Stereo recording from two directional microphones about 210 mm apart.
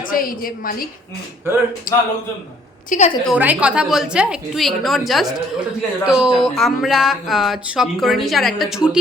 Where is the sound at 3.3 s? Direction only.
5° right (ahead or behind).